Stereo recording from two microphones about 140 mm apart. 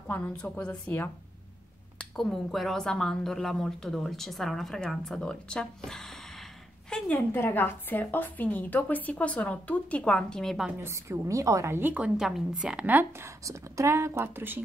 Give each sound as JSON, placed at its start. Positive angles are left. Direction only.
{"t": 0.1, "sound": "a woman's voice", "side_deg": 10}
{"t": 10.8, "sound": "a woman's voice", "side_deg": -20}
{"t": 13.4, "sound": "speech", "side_deg": -25}